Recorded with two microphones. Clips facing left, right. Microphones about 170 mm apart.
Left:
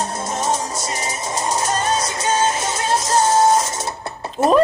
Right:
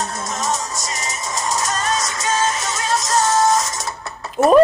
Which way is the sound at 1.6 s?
30° left (ahead or behind).